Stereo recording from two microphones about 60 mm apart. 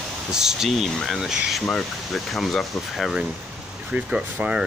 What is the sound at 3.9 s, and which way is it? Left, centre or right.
Speech, centre.